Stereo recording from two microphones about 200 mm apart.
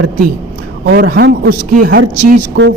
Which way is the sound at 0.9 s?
55° right (ahead or behind).